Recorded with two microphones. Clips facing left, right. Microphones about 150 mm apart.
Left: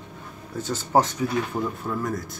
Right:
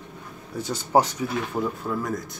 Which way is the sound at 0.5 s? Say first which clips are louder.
Even; 10° right (ahead or behind).